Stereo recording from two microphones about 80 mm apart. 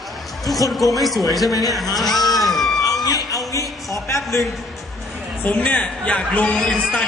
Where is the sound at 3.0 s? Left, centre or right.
Left.